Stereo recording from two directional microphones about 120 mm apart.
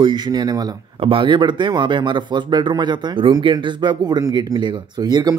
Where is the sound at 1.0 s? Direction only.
45° right (ahead or behind).